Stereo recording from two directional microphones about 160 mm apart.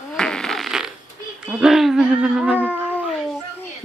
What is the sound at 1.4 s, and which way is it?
Speech, 5° right (ahead or behind).